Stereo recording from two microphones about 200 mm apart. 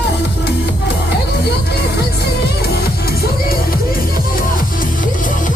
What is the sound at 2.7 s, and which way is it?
Music, 50° left (ahead or behind).